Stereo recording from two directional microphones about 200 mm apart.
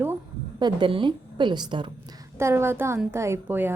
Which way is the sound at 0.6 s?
25° right (ahead or behind).